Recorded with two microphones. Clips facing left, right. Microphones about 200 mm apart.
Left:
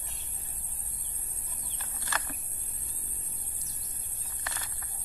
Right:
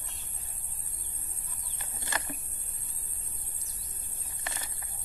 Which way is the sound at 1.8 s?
10° right (ahead or behind).